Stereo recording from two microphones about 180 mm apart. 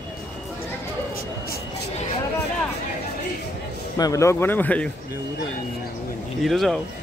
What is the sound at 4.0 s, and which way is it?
Speech, 15° left (ahead or behind).